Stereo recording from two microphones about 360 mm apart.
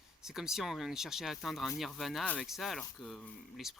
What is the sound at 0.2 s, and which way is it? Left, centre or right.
Speech, centre.